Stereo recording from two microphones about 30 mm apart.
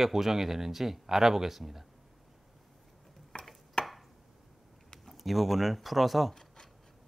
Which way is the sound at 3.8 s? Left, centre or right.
Left.